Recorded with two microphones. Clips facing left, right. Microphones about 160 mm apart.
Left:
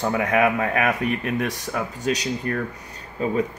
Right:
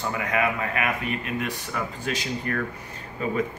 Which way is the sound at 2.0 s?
40° left (ahead or behind).